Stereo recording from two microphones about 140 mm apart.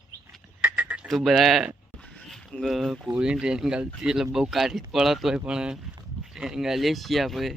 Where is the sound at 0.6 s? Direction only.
10° right (ahead or behind).